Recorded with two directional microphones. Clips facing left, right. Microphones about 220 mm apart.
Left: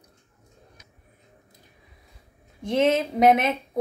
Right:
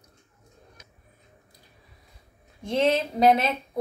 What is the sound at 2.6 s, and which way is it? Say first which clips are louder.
Speech: left 2 dB; 20° left (ahead or behind).